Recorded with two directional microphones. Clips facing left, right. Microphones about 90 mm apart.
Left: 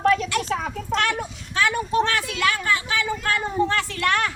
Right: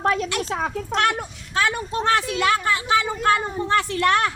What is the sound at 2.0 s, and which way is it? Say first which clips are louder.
Speech: right 3 dB; 25° right (ahead or behind).